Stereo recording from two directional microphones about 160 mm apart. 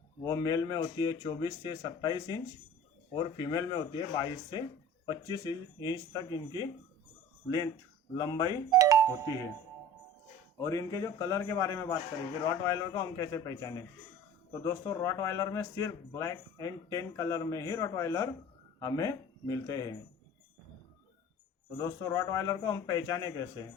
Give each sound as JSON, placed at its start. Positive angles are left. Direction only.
{"t": 0.2, "sound": "speech", "side_deg": 20}
{"t": 8.1, "sound": "speech", "side_deg": 25}
{"t": 8.7, "sound": "doorbell", "side_deg": -20}
{"t": 10.6, "sound": "speech", "side_deg": 20}
{"t": 21.8, "sound": "speech", "side_deg": 20}